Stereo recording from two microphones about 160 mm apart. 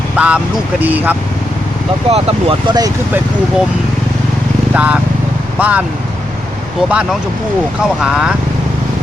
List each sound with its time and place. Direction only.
0.2 s speech: 10° right (ahead or behind)
2.0 s speech: 35° right (ahead or behind)
4.7 s speech: 10° right (ahead or behind)
6.8 s speech: 5° right (ahead or behind)